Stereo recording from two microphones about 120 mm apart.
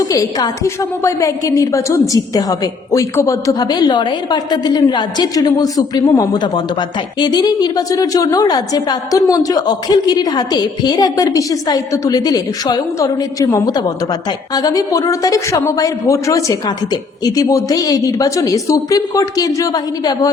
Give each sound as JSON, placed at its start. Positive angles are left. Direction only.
{"t": 0.1, "sound": "a woman's voice", "side_deg": 30}